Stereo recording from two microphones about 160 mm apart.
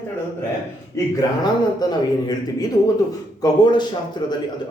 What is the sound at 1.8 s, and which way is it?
Speech, 25° left (ahead or behind).